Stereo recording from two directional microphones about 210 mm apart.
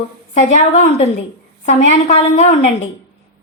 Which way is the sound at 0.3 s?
30° left (ahead or behind).